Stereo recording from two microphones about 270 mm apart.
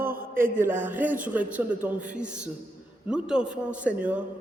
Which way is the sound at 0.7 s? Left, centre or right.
Centre.